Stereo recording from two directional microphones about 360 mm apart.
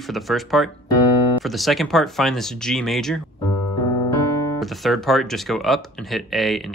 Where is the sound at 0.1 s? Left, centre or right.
Centre.